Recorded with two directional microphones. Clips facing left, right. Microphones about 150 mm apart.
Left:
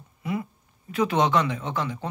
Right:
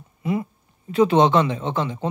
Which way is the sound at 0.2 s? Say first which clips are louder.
Right 5 dB; 25° right (ahead or behind).